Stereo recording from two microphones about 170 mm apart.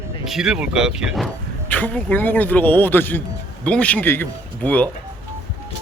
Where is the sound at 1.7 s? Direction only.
10° left (ahead or behind).